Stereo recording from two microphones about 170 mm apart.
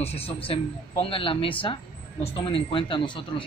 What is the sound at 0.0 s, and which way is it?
A man's voice, 35° left (ahead or behind).